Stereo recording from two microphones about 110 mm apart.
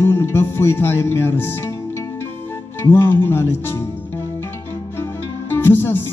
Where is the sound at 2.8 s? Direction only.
20° left (ahead or behind).